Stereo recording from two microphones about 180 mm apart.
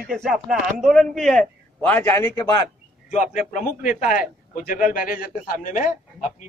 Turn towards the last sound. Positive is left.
turn(degrees=45)  # may be behind; listen again after turning